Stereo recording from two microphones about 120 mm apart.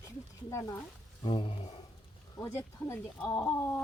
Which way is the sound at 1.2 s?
45° left (ahead or behind).